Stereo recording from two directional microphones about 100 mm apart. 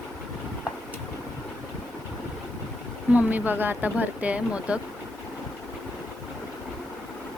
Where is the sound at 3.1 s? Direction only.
15° right (ahead or behind).